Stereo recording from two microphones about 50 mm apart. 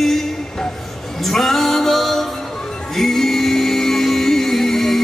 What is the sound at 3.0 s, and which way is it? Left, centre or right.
Music, centre.